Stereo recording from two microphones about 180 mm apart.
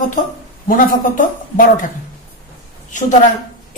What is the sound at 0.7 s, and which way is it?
A man's voice, 50° left (ahead or behind).